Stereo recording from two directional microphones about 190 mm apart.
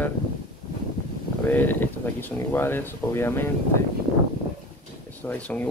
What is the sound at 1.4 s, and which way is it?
Speech, 10° left (ahead or behind).